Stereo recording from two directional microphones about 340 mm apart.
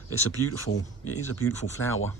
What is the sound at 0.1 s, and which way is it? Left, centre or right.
Speech, left.